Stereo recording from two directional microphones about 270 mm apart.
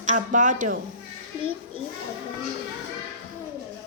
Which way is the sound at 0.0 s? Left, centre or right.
Right.